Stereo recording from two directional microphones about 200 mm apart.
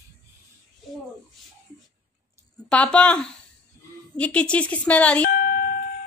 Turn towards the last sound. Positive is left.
turn(degrees=45)  # may be behind; listen again after turning